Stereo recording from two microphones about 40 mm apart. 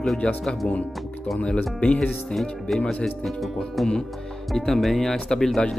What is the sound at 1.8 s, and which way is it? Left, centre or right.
Speech, left.